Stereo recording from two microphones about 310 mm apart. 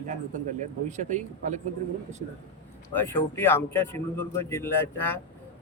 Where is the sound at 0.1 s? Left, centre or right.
Right.